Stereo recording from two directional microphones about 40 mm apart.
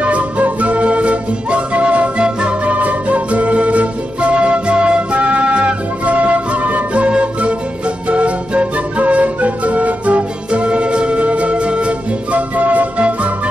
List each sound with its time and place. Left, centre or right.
0.0 s flute: right
2.7 s music: right